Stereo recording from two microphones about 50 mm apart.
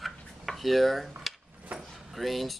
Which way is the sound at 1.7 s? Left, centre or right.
Right.